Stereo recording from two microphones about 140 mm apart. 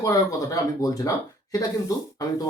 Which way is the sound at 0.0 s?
25° left (ahead or behind).